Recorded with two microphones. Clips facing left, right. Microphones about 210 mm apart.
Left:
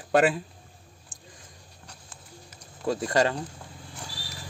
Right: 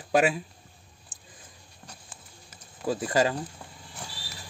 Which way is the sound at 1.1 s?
5° right (ahead or behind).